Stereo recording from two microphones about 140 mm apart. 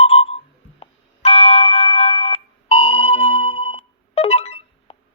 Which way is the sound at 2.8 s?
40° left (ahead or behind).